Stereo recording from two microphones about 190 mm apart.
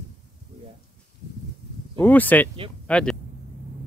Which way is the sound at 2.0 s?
10° left (ahead or behind).